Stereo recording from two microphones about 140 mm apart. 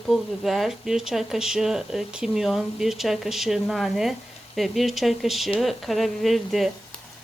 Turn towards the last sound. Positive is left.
turn(degrees=0)  # may be behind; listen again after turning